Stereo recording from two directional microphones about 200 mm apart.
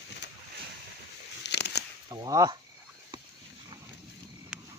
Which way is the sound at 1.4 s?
60° left (ahead or behind).